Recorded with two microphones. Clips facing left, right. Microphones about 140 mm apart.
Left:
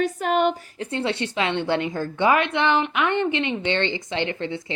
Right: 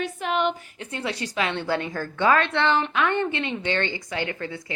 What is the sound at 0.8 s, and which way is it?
A woman's voice, 30° left (ahead or behind).